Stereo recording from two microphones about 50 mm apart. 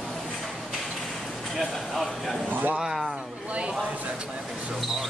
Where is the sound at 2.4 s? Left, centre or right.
Right.